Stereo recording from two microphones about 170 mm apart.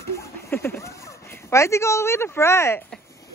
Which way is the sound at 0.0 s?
15° left (ahead or behind).